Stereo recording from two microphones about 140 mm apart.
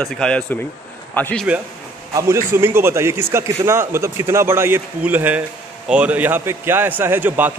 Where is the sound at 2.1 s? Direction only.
20° right (ahead or behind).